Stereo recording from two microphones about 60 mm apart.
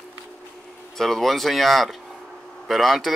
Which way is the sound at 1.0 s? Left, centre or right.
Centre.